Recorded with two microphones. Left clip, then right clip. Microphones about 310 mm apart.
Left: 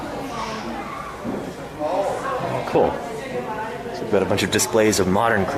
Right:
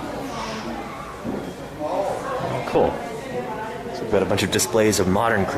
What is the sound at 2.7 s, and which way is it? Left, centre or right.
Speech, centre.